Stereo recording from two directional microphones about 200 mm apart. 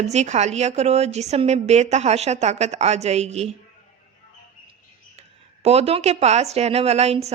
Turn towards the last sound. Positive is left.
turn(degrees=-30)  # may be behind; listen again after turning